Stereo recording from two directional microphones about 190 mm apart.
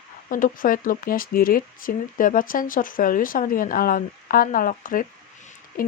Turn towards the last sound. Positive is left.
turn(degrees=50)  # may be behind; listen again after turning